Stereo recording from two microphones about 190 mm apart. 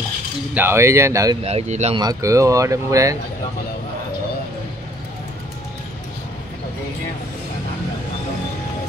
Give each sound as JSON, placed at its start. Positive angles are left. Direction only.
{"t": 0.6, "sound": "speech", "side_deg": -15}
{"t": 1.4, "sound": "speech", "side_deg": -35}
{"t": 2.0, "sound": "speech", "side_deg": -20}